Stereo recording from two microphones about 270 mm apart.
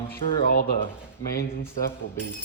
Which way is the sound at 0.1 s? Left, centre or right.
Left.